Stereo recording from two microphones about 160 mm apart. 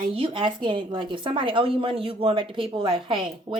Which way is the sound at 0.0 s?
30° right (ahead or behind).